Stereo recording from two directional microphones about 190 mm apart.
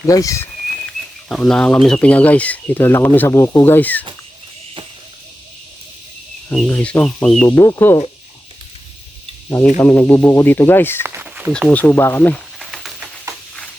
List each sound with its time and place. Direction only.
0.0 s speech: 15° left (ahead or behind)
0.9 s speech: 5° left (ahead or behind)
6.7 s speech: 10° left (ahead or behind)
7.4 s speech: 15° left (ahead or behind)
9.7 s speech: 10° left (ahead or behind)
11.0 s a sound: 10° right (ahead or behind)
11.5 s a sound: 5° left (ahead or behind)